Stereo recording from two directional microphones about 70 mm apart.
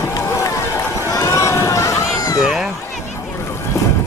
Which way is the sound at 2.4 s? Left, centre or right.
Centre.